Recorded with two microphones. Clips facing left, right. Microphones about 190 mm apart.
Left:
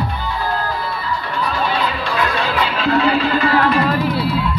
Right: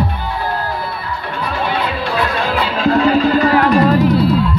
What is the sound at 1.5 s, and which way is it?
Music, 65° right (ahead or behind).